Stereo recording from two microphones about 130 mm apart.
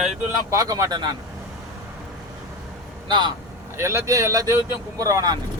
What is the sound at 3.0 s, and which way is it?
Speech, 35° right (ahead or behind).